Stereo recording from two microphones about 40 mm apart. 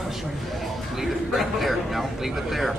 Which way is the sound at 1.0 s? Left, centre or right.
Centre.